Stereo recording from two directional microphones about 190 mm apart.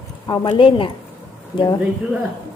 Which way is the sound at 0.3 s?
25° left (ahead or behind).